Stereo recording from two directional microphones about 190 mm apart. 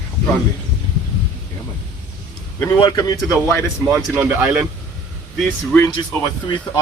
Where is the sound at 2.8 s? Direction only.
20° left (ahead or behind).